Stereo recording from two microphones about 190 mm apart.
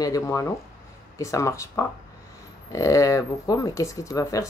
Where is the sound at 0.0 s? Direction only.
15° left (ahead or behind).